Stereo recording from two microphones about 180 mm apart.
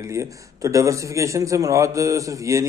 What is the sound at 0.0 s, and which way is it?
A man's voice, 15° right (ahead or behind).